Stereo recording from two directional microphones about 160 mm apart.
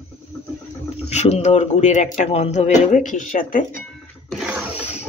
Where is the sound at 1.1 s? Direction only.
45° left (ahead or behind).